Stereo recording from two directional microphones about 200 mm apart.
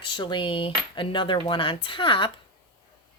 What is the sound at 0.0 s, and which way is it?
Cutlery, 25° left (ahead or behind).